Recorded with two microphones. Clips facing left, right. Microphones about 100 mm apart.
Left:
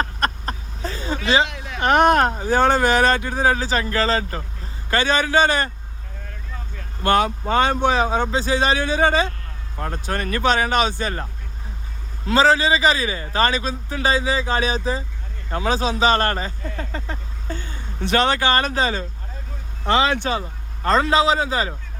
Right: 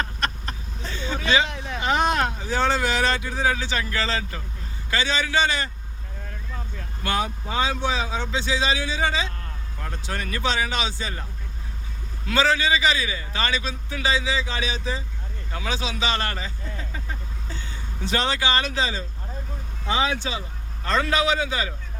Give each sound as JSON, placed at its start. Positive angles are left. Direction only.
{"t": 0.0, "sound": "a sound", "side_deg": 40}
{"t": 1.5, "sound": "a sound", "side_deg": -30}
{"t": 1.8, "sound": "speech", "side_deg": 60}
{"t": 7.2, "sound": "speech", "side_deg": 70}
{"t": 12.2, "sound": "speech", "side_deg": 35}
{"t": 19.8, "sound": "speech", "side_deg": 75}
{"t": 20.8, "sound": "speech", "side_deg": 35}